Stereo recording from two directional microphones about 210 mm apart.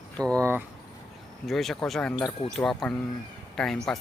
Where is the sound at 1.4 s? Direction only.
Centre (ahead or behind).